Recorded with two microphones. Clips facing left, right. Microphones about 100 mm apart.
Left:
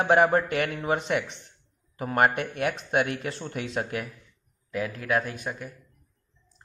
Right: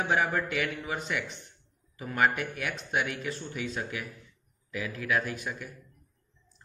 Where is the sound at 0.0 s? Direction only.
60° left (ahead or behind).